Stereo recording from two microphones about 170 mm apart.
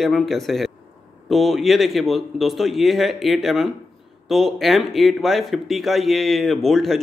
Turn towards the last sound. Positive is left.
turn(degrees=0)  # may be behind; listen again after turning